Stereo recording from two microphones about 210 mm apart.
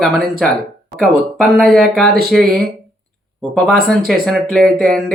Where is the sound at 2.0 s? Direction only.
45° right (ahead or behind).